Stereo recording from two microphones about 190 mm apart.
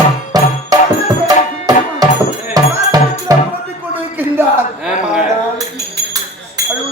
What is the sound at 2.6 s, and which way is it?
Music, 20° right (ahead or behind).